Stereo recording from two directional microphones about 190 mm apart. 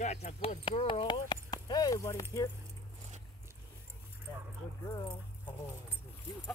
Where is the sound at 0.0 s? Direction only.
35° left (ahead or behind); by 2.2 s 15° left (ahead or behind).